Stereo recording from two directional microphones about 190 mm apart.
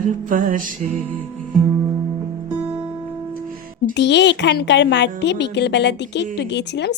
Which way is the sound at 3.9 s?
65° left (ahead or behind).